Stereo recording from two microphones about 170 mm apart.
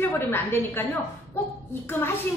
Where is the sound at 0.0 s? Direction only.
15° left (ahead or behind).